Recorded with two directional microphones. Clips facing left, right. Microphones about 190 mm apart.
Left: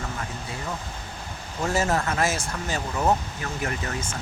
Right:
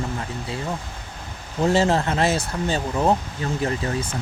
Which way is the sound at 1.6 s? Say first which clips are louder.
Right 5 dB; 30° right (ahead or behind).